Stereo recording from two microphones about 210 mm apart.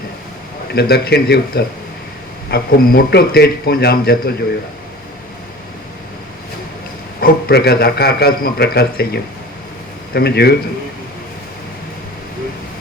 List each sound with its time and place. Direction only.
0.7 s a man's voice: 50° left (ahead or behind)
7.2 s a man's voice: 50° left (ahead or behind)